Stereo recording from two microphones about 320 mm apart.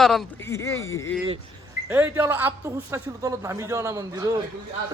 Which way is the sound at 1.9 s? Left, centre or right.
Centre.